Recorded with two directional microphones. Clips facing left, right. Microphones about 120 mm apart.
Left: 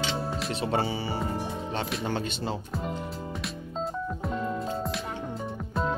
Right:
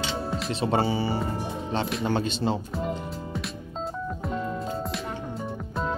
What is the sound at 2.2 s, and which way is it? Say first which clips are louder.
Speech: right 5 dB; 30° right (ahead or behind).